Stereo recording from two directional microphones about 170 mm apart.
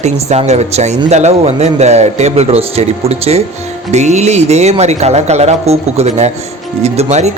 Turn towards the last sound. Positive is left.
turn(degrees=-40)  # may be behind; listen again after turning